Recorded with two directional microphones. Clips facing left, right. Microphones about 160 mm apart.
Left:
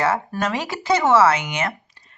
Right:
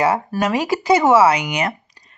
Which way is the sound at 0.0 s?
15° right (ahead or behind).